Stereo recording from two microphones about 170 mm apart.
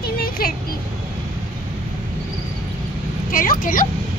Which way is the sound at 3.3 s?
55° left (ahead or behind).